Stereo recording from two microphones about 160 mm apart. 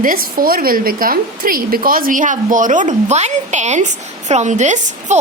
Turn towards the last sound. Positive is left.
turn(degrees=-50)  # may be behind; listen again after turning